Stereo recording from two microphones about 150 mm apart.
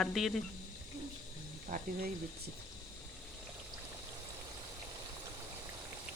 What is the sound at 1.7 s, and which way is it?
Speech, 65° right (ahead or behind).